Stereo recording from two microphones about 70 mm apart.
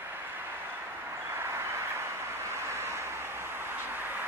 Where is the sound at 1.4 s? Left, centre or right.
Right.